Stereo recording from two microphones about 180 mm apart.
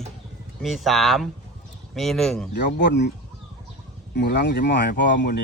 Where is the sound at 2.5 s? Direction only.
70° left (ahead or behind).